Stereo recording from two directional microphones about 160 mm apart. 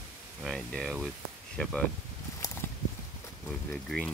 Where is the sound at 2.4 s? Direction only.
20° left (ahead or behind).